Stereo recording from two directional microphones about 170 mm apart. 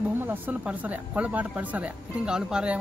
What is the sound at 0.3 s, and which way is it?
Speech, 10° right (ahead or behind).